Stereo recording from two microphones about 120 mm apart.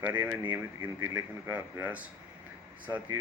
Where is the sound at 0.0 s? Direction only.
15° right (ahead or behind).